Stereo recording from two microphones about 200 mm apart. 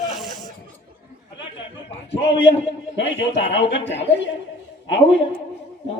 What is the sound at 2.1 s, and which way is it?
Speech, 60° left (ahead or behind).